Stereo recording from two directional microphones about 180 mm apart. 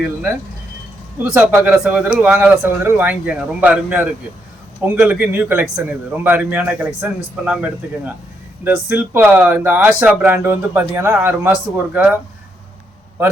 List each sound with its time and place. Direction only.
0.0 s a man's voice: 5° right (ahead or behind)